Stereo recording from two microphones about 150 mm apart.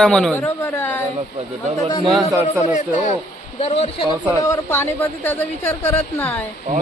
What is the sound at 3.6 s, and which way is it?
Speech, 40° left (ahead or behind).